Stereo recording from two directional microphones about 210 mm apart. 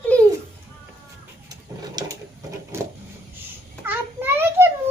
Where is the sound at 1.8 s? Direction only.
20° right (ahead or behind).